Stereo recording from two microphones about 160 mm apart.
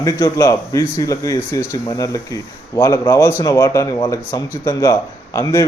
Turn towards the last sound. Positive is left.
turn(degrees=20)  # may be behind; listen again after turning